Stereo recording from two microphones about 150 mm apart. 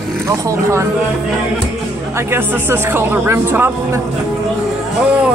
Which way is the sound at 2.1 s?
15° right (ahead or behind).